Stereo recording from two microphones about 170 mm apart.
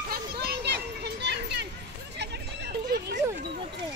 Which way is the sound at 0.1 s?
70° right (ahead or behind).